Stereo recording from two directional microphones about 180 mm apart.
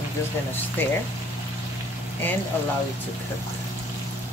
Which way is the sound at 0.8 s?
10° left (ahead or behind).